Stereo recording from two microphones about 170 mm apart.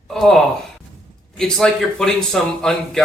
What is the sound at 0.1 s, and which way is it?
A man's voice, centre (ahead or behind).